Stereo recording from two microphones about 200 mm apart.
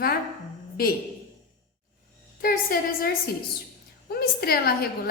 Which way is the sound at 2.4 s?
45° left (ahead or behind).